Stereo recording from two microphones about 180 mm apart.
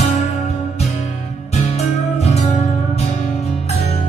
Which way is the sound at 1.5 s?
35° left (ahead or behind).